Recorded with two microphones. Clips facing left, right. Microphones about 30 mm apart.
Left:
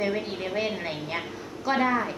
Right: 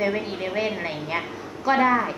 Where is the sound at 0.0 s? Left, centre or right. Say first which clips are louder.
Right 3 dB; centre.